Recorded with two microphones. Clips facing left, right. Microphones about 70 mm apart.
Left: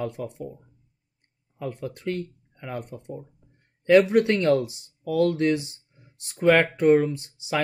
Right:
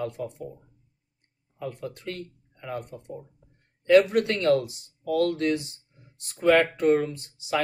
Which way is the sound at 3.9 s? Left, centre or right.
Centre.